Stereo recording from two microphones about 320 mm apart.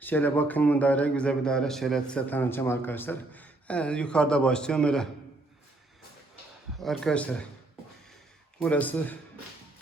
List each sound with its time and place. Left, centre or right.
0.0 s a man's voice: centre
6.7 s a man's voice: centre
8.5 s a man's voice: centre